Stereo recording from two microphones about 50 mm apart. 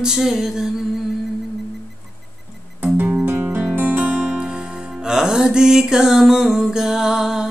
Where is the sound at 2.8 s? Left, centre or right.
Right.